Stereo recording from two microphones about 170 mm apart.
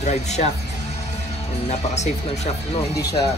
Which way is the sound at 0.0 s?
40° left (ahead or behind).